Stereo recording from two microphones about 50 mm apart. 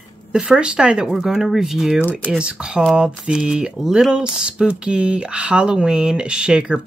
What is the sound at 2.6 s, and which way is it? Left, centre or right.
Speech, centre.